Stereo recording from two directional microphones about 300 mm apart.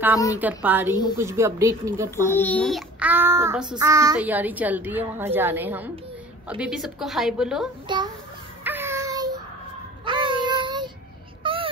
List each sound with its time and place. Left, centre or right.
0.4 s a woman's voice: centre
1.1 s child singing: centre
2.3 s child singing: centre
6.6 s a woman's voice: centre
7.9 s a sound: centre
10.0 s child singing: centre
11.4 s a sound: centre